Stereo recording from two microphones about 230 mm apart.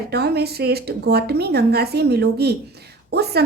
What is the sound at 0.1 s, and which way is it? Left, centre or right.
A woman's voice, right.